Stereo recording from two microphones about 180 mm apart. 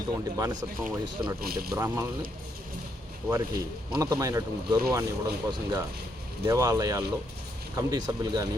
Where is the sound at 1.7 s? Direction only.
15° right (ahead or behind).